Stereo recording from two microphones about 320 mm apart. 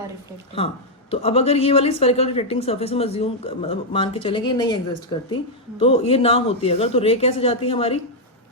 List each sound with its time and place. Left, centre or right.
1.1 s a woman's voice: centre
5.8 s a woman's voice: centre